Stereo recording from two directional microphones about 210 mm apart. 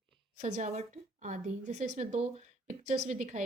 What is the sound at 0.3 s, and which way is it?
A woman's voice, 35° right (ahead or behind).